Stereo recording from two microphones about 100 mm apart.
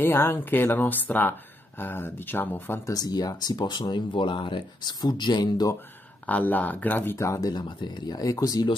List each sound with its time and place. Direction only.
0.0 s speech: 25° left (ahead or behind)
2.9 s speech: 40° left (ahead or behind)
6.2 s speech: 15° left (ahead or behind); by 8.6 s 35° left (ahead or behind)